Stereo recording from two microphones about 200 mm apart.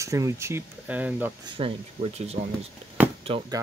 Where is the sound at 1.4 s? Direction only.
30° right (ahead or behind).